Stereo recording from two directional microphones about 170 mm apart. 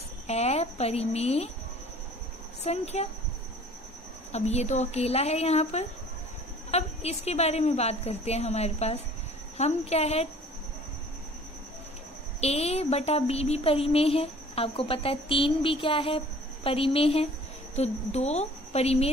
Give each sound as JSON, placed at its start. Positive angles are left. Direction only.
{"t": 0.3, "sound": "speech", "side_deg": 40}
{"t": 2.6, "sound": "speech", "side_deg": 40}
{"t": 4.3, "sound": "speech", "side_deg": 40}
{"t": 12.4, "sound": "speech", "side_deg": 40}